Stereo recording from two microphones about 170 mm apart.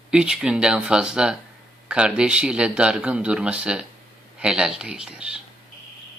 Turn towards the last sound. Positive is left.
turn(degrees=-5)  # may be behind; listen again after turning